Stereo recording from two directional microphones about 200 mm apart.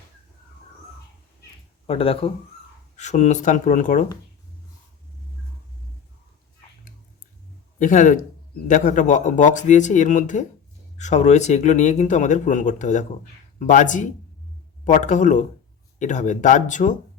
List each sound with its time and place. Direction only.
1.9 s speech: 30° left (ahead or behind)
7.8 s speech: 40° left (ahead or behind)